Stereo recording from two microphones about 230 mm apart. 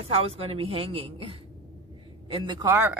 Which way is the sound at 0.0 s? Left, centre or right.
Right.